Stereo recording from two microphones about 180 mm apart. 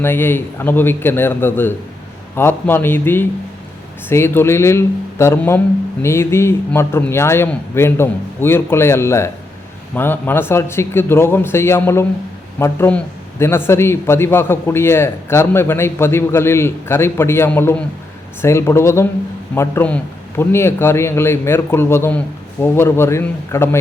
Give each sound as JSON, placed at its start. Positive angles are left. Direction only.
{"t": 0.0, "sound": "speech", "side_deg": 10}